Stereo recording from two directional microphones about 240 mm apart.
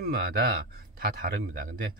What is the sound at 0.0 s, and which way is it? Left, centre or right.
Speech, right.